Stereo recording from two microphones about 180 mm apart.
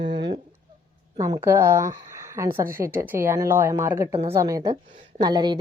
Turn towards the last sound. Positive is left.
turn(degrees=-25)  # may be behind; listen again after turning